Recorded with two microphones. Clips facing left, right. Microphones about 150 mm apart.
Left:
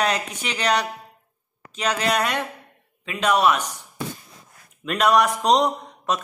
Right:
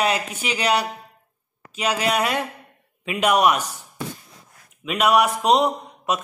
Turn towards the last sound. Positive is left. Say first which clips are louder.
# right 1 dB
turn(degrees=-5)  # may be behind; listen again after turning